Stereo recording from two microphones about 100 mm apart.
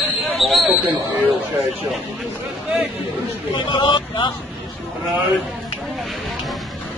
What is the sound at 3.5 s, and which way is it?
Speech, 50° left (ahead or behind).